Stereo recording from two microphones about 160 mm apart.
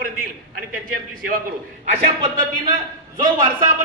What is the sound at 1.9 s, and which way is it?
Speech, 40° right (ahead or behind).